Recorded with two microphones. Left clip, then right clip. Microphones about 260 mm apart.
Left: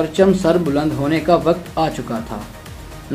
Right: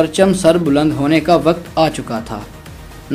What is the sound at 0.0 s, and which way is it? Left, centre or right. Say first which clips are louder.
Speech: right 3 dB; right.